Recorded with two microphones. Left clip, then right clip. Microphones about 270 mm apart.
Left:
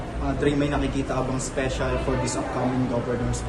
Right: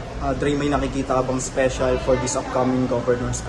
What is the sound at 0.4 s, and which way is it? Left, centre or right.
A man's voice, right.